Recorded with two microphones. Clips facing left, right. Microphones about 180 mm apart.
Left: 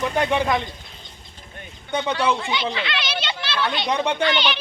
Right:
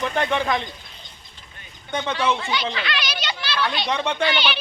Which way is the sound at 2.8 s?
25° left (ahead or behind).